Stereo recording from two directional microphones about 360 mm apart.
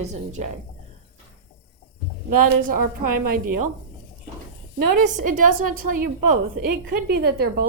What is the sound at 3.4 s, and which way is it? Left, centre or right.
Speech, right.